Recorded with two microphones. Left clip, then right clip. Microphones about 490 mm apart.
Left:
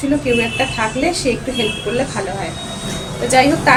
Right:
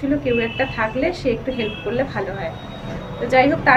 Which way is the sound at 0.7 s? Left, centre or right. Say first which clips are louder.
Left 3 dB; right.